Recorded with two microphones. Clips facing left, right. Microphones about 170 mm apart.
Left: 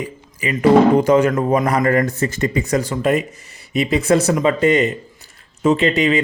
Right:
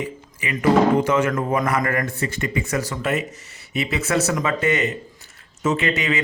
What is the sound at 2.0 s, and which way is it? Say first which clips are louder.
Speech: left 6 dB; 45° left (ahead or behind).